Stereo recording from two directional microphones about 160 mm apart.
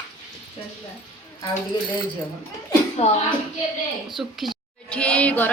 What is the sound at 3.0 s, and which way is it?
Speech, 40° left (ahead or behind).